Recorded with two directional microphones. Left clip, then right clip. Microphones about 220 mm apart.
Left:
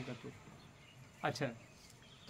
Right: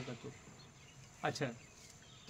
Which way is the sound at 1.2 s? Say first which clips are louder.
Even; 5° right (ahead or behind).